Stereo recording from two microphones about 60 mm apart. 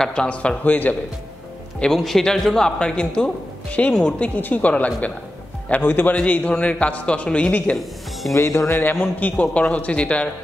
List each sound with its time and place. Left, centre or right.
0.0 s a man's voice: centre
2.0 s a man's voice: centre; by 7.7 s left
8.3 s speech: left
9.4 s a man's voice: left